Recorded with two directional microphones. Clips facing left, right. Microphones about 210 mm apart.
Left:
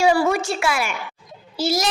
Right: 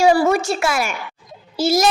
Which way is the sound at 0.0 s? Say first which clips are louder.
Right 3 dB; 40° right (ahead or behind).